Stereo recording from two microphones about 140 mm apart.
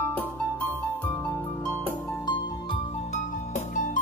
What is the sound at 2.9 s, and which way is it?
Music, 55° left (ahead or behind).